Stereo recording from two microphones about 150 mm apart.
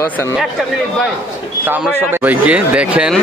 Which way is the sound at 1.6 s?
15° right (ahead or behind).